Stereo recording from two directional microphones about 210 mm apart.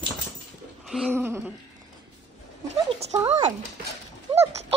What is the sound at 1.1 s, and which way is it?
Speech, 10° right (ahead or behind).